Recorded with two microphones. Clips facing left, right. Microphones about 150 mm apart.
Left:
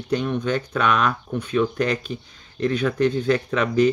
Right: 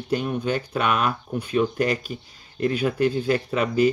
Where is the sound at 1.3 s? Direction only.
30° right (ahead or behind).